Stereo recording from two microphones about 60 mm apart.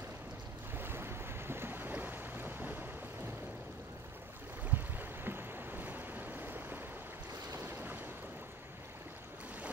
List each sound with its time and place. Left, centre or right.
0.7 s boat: right
4.6 s waves: right
7.6 s boat: right